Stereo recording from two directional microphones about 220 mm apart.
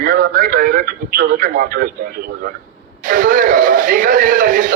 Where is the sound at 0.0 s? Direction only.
40° right (ahead or behind).